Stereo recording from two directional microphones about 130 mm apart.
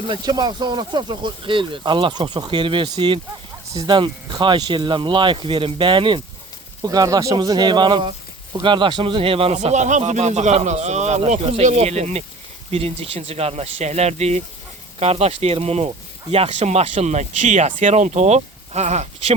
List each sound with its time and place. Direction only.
0.1 s speech: 30° right (ahead or behind)
9.6 s speech: 65° right (ahead or behind)
11.3 s speech: 50° right (ahead or behind)